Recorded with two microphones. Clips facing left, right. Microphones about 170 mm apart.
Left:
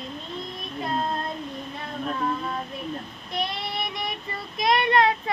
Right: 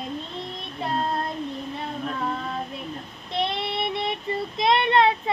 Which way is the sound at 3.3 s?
25° right (ahead or behind).